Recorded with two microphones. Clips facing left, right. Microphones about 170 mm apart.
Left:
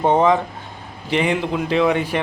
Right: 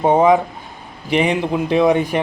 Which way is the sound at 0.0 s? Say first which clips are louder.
Right 3 dB; 10° right (ahead or behind).